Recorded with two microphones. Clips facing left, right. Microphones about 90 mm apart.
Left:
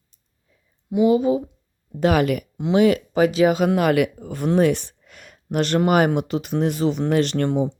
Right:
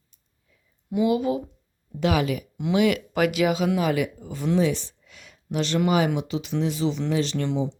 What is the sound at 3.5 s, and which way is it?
Speech, 55° left (ahead or behind).